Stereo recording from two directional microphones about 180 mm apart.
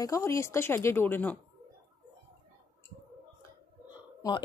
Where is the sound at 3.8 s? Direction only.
20° left (ahead or behind).